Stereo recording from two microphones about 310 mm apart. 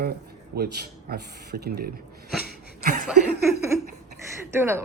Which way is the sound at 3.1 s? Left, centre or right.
Centre.